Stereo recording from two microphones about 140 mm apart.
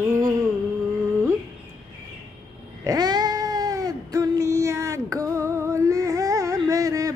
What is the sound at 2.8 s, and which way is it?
Cat, 30° right (ahead or behind).